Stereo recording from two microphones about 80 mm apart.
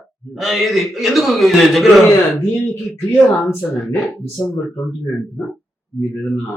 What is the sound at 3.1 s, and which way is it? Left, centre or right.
Speech, left.